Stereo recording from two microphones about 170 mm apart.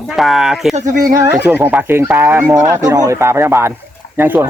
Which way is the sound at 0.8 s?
45° right (ahead or behind).